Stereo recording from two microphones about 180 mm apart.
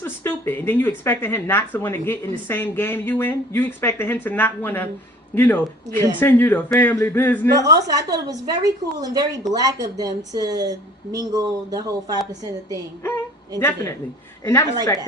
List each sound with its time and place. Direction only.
0.0 s speech: 10° left (ahead or behind)
7.6 s speech: 20° right (ahead or behind)
13.6 s speech: 15° left (ahead or behind)